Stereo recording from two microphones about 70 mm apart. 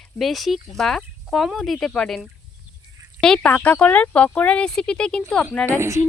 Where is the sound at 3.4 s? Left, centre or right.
Left.